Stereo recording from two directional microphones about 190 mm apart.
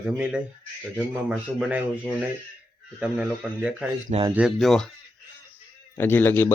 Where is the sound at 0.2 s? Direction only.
5° right (ahead or behind).